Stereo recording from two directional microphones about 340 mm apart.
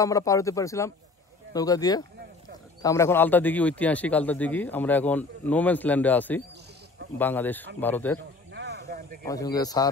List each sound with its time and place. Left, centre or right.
0.0 s speech: centre
8.5 s a sound: right
9.2 s speech: centre